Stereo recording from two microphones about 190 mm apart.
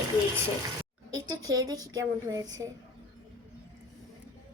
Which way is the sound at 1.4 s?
20° right (ahead or behind).